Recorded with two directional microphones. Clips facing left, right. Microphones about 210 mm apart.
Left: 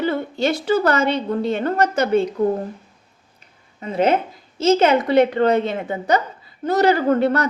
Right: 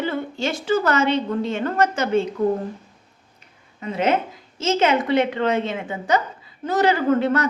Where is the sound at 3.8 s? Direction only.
35° left (ahead or behind).